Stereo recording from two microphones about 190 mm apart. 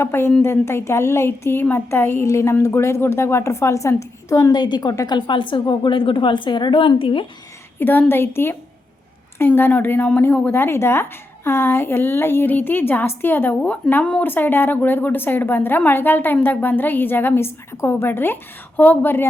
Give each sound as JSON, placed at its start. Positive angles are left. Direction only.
{"t": 0.0, "sound": "a woman's voice", "side_deg": 10}
{"t": 7.8, "sound": "a woman's voice", "side_deg": 10}